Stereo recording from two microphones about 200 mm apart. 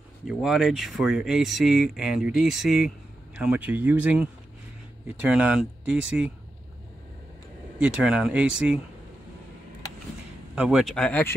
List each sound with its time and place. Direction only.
0.3 s speech: 5° right (ahead or behind)
7.8 s speech: 5° right (ahead or behind)
10.5 s speech: 5° right (ahead or behind)